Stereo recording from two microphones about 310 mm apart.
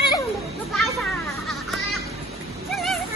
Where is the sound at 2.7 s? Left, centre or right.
Centre.